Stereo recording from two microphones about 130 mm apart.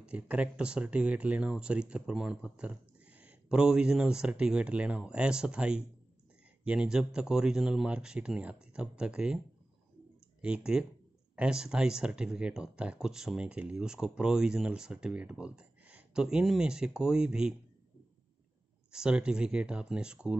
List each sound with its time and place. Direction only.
0.0 s speech: 10° right (ahead or behind)
10.4 s speech: 5° right (ahead or behind)
18.9 s speech: 5° right (ahead or behind)